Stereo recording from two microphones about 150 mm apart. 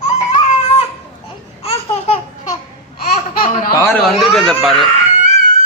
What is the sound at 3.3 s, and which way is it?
Laughter, 70° left (ahead or behind).